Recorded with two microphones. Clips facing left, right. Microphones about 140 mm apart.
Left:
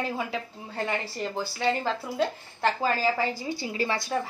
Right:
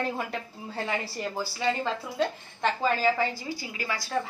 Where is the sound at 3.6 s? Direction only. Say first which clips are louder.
Left 5 dB; 30° left (ahead or behind).